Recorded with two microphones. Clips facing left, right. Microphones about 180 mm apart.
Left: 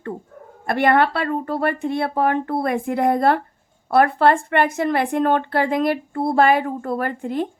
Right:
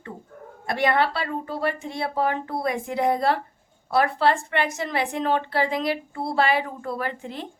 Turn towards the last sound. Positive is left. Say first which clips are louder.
# left 7 dB
turn(degrees=50)  # may be behind; listen again after turning